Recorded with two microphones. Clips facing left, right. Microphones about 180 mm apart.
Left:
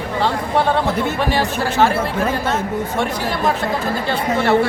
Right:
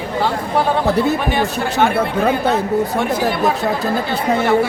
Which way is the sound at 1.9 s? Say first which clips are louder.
Right 3 dB; 60° right (ahead or behind).